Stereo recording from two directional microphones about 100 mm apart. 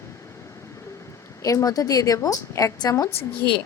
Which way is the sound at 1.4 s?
35° left (ahead or behind).